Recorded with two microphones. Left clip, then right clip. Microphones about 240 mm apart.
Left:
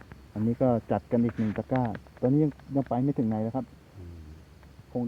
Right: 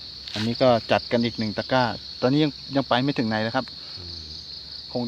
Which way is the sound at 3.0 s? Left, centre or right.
Right.